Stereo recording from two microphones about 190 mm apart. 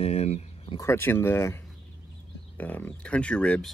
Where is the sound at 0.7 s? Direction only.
15° left (ahead or behind).